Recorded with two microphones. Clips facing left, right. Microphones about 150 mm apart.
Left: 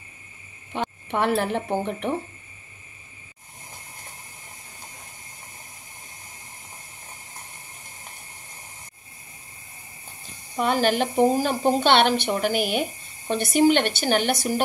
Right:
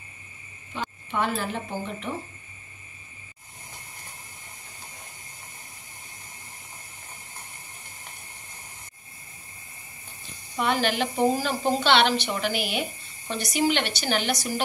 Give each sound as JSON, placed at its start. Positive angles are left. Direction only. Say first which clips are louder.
{"t": 0.7, "sound": "speech", "louder": "left 3 dB", "side_deg": 60}
{"t": 10.6, "sound": "a woman's voice", "louder": "left 3 dB", "side_deg": 45}